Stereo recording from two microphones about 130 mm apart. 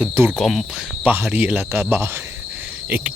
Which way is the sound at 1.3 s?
15° right (ahead or behind).